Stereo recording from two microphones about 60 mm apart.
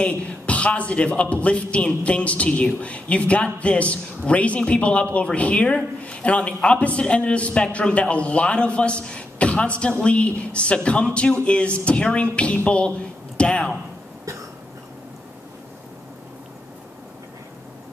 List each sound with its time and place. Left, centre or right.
0.0 s a man's voice: left